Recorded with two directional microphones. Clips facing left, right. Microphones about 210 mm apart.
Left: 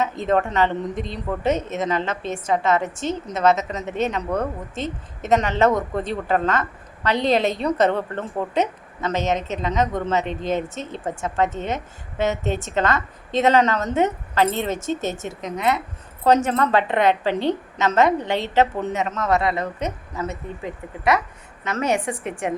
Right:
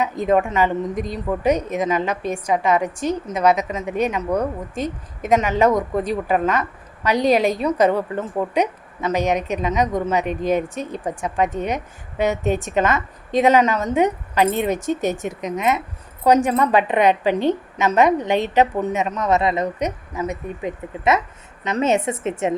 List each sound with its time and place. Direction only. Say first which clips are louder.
0.0 s a woman's voice: right 2 dB; 10° right (ahead or behind)